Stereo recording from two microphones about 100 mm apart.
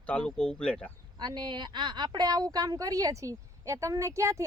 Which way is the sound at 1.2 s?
50° right (ahead or behind).